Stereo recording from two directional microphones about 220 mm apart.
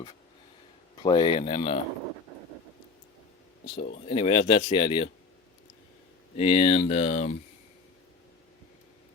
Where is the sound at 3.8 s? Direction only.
45° left (ahead or behind).